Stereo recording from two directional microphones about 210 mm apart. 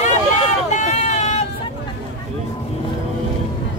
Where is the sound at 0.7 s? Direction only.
35° left (ahead or behind).